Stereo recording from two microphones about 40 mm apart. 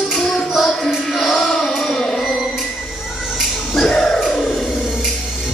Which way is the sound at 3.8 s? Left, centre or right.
Centre.